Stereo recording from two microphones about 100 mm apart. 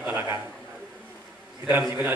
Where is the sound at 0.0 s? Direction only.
20° right (ahead or behind).